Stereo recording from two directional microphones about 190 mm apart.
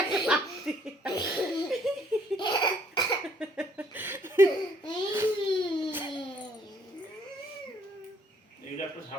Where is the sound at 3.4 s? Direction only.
5° right (ahead or behind).